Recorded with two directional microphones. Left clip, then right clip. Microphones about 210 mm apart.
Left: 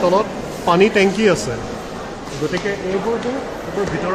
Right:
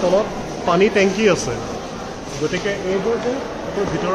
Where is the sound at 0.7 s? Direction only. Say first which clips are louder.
Left 2 dB; 45° left (ahead or behind).